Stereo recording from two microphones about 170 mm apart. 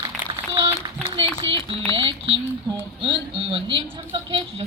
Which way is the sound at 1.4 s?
35° right (ahead or behind).